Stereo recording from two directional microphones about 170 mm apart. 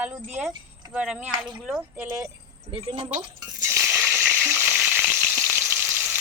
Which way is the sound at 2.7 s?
30° right (ahead or behind).